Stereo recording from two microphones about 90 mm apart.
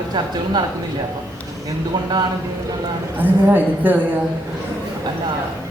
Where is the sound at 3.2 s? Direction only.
20° right (ahead or behind).